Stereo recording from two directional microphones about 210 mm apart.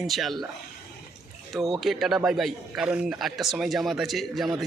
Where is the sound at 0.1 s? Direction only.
Centre (ahead or behind).